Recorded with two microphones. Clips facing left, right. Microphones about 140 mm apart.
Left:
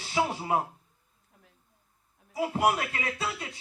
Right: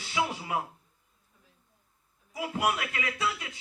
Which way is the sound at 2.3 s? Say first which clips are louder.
Left 4 dB; 35° left (ahead or behind).